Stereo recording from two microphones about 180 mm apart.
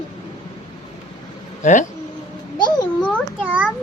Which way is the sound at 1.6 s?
45° left (ahead or behind).